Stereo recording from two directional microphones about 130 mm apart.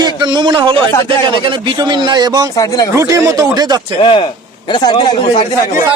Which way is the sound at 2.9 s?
25° right (ahead or behind).